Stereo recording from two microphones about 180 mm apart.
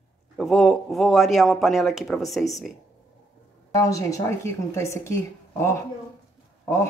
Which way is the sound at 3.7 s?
20° left (ahead or behind).